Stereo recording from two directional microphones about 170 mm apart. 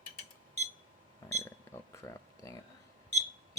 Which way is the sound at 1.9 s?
15° left (ahead or behind).